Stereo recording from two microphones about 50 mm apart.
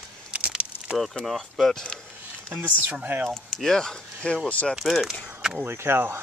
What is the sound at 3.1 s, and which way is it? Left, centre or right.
Speech, right.